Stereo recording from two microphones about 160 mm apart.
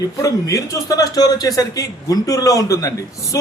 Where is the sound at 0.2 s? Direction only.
20° left (ahead or behind).